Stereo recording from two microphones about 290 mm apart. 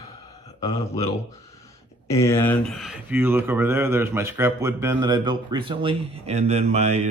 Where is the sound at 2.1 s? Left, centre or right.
Centre.